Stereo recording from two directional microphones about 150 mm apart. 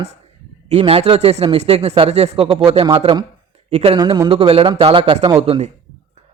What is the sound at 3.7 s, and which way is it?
Speech, 45° right (ahead or behind).